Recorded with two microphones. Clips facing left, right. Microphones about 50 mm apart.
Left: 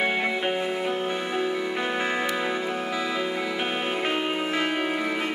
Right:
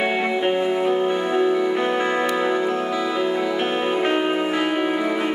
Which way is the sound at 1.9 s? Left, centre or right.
Centre.